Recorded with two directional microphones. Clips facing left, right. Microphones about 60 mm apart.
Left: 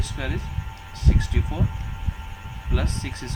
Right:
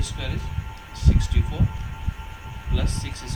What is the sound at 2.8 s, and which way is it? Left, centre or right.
Speech, left.